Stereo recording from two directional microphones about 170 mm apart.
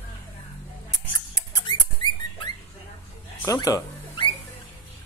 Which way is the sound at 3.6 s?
25° left (ahead or behind).